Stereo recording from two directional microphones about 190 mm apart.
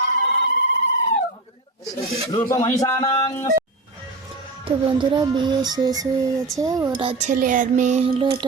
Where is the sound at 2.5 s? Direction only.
15° left (ahead or behind).